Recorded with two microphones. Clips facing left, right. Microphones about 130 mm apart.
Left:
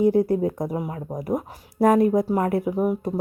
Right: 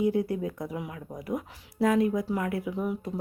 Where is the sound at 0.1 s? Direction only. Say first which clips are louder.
Left 8 dB; 40° left (ahead or behind).